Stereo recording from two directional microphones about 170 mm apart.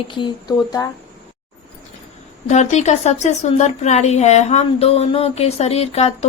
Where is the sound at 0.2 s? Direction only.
25° left (ahead or behind).